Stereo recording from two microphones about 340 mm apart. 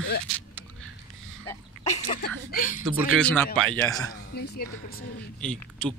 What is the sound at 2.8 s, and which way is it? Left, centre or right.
A man's voice, centre.